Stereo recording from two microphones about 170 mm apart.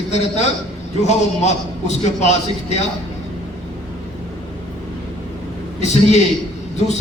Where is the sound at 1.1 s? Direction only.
40° left (ahead or behind).